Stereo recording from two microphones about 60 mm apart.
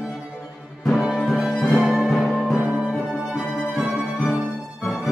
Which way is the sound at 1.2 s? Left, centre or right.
Centre.